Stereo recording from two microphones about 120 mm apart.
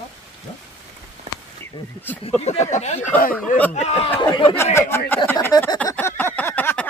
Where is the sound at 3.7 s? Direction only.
65° left (ahead or behind).